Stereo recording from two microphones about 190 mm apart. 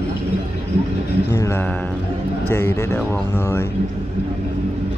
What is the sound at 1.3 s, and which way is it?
Speech, 15° left (ahead or behind).